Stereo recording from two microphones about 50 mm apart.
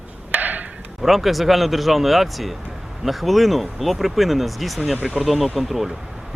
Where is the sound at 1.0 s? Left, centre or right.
Centre.